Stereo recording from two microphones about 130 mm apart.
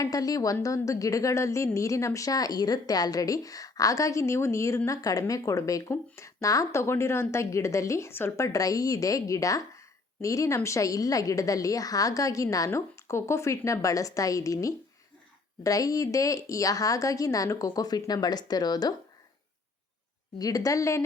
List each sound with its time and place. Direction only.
0.0 s speech: 30° left (ahead or behind)
20.4 s speech: 30° left (ahead or behind)